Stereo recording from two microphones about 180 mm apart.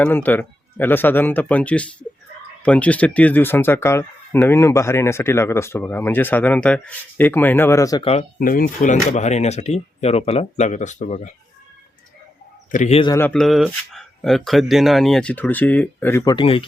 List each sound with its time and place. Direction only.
0.0 s speech: 10° left (ahead or behind)
8.4 s speech: 50° left (ahead or behind)
12.7 s speech: 40° left (ahead or behind)
13.1 s speech: 5° left (ahead or behind)
16.3 s speech: 30° left (ahead or behind)